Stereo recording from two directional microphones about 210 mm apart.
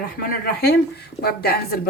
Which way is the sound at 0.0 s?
45° left (ahead or behind).